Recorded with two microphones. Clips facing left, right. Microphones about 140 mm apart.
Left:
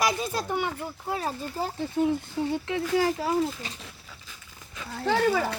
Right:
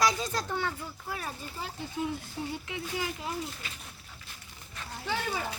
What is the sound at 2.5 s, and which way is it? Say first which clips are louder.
Speech: left 13 dB; 70° left (ahead or behind).